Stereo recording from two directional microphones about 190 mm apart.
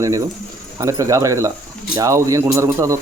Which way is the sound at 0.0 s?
20° right (ahead or behind).